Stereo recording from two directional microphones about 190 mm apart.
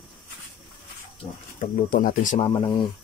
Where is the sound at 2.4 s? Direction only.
25° left (ahead or behind).